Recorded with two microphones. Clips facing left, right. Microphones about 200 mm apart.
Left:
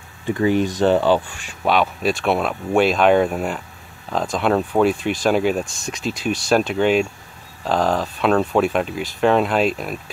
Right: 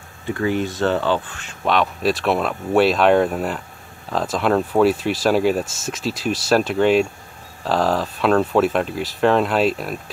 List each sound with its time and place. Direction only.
0.3 s speech: 20° left (ahead or behind); by 10.1 s centre (ahead or behind)